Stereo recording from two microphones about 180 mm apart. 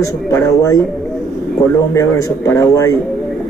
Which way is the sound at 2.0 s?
15° left (ahead or behind).